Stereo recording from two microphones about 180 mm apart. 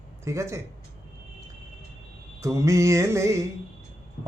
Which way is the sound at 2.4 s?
15° right (ahead or behind).